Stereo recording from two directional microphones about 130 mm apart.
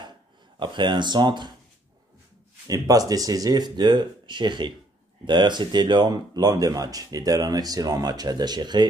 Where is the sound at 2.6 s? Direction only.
25° right (ahead or behind).